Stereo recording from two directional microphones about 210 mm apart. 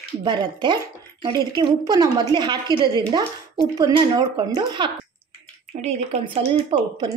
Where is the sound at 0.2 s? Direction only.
20° right (ahead or behind).